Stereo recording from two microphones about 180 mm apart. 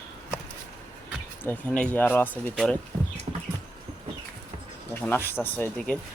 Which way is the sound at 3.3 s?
35° right (ahead or behind).